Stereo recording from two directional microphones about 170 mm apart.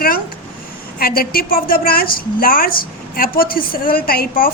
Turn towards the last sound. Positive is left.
turn(degrees=60)  # may be behind; listen again after turning